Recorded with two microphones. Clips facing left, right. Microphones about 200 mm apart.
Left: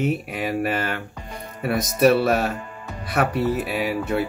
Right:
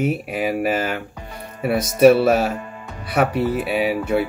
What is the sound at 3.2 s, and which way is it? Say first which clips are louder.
Speech: right 2 dB; centre (ahead or behind).